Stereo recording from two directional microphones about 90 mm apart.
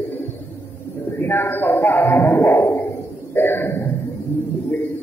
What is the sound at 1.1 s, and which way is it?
A man's voice, 25° left (ahead or behind).